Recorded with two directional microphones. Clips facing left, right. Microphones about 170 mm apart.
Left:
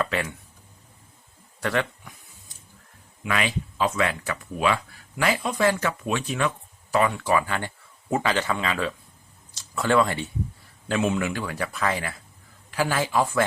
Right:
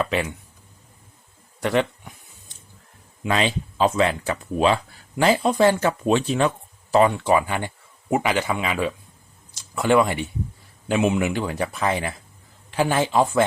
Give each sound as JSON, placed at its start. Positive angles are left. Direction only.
{"t": 0.0, "sound": "speech", "side_deg": -20}
{"t": 1.6, "sound": "speech", "side_deg": -20}
{"t": 3.2, "sound": "speech", "side_deg": -30}